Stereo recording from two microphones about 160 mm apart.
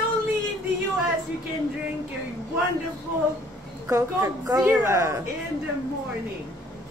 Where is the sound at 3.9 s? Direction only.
20° right (ahead or behind).